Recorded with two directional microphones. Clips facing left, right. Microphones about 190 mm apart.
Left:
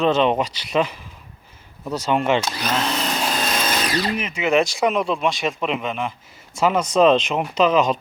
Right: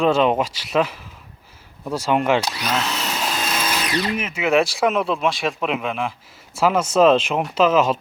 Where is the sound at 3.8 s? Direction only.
30° left (ahead or behind).